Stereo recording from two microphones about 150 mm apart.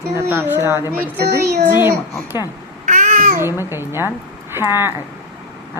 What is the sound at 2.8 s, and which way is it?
Babbling, 55° right (ahead or behind).